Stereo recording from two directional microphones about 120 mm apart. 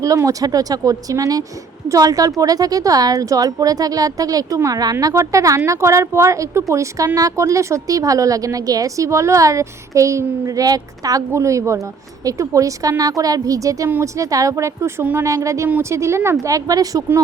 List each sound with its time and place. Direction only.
0.0 s speech: 25° right (ahead or behind)